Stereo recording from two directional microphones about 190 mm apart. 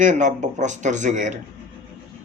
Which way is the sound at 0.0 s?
40° right (ahead or behind).